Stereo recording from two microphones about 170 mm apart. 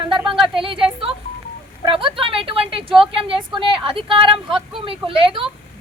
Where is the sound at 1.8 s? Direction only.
30° right (ahead or behind).